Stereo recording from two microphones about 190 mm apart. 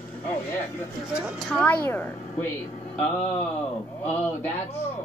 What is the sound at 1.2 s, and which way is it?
Speech, 5° left (ahead or behind).